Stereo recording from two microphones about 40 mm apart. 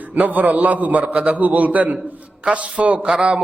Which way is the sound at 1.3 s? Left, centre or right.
Right.